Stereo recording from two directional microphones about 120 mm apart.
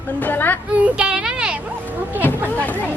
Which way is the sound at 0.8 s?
10° right (ahead or behind).